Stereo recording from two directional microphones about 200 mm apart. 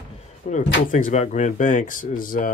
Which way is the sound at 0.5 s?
40° left (ahead or behind).